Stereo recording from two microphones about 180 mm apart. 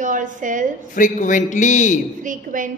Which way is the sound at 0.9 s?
45° left (ahead or behind).